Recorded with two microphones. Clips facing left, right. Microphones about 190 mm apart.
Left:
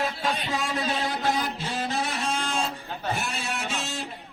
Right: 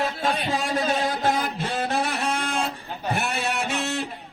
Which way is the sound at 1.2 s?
50° right (ahead or behind).